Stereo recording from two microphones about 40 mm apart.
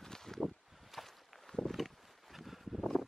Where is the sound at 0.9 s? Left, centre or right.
Centre.